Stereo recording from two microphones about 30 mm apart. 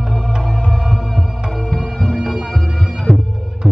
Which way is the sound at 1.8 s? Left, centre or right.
Centre.